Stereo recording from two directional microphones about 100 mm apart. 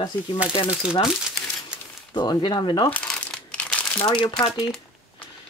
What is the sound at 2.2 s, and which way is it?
Speech, 45° left (ahead or behind).